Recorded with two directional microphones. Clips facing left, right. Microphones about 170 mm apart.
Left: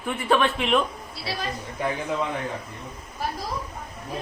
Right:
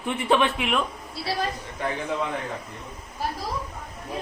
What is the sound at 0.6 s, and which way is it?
Speech, 5° right (ahead or behind).